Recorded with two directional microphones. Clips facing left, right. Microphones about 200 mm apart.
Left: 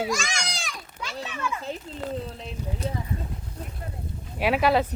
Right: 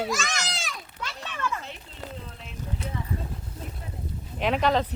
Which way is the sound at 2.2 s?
35° left (ahead or behind).